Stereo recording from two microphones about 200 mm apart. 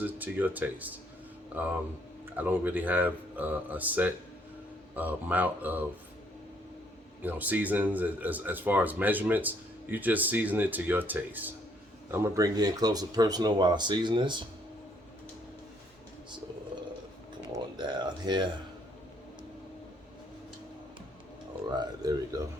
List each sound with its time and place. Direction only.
0.0 s speech: 10° right (ahead or behind)
7.2 s speech: 10° right (ahead or behind)
17.7 s speech: 20° right (ahead or behind)
21.8 s speech: 20° right (ahead or behind)